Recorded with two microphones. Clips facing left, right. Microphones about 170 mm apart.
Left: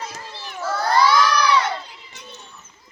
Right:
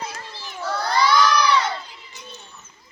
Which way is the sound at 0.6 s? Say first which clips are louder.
Left 3 dB; 5° left (ahead or behind).